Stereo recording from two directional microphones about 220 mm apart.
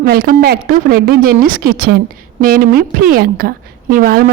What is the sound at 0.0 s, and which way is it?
A woman's voice, 40° right (ahead or behind).